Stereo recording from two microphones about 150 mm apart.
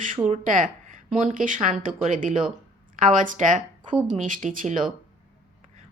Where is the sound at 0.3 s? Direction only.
60° right (ahead or behind).